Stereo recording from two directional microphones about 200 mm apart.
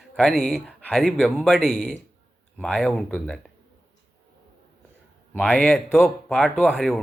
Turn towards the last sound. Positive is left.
turn(degrees=0)  # may be behind; listen again after turning